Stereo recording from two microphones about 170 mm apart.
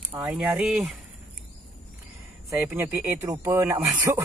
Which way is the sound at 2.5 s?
10° right (ahead or behind).